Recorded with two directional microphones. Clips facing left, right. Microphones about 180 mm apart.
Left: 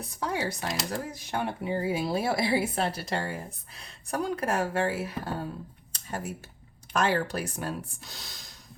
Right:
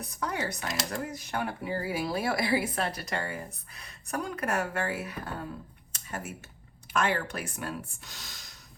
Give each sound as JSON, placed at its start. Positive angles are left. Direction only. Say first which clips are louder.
{"t": 0.0, "sound": "a woman's voice", "louder": "left 2 dB", "side_deg": 30}
{"t": 5.9, "sound": "a sound", "louder": "left 3 dB", "side_deg": 35}
{"t": 6.9, "sound": "speech", "louder": "left 3 dB", "side_deg": 35}